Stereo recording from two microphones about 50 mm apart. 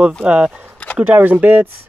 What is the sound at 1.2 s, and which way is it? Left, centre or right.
Speech, right.